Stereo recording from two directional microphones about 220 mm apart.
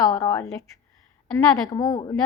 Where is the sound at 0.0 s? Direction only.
15° left (ahead or behind).